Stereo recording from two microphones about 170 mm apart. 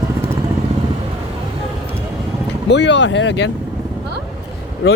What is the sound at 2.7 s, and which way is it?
Speech, 90° left.